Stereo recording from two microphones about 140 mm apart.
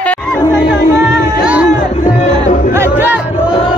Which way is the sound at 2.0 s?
50° left (ahead or behind).